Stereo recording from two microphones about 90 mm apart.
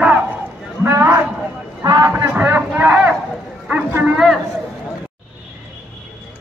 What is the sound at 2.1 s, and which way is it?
A man's voice, 25° right (ahead or behind).